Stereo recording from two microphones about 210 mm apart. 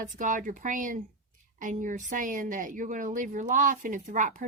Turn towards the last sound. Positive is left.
turn(degrees=-35)  # may be behind; listen again after turning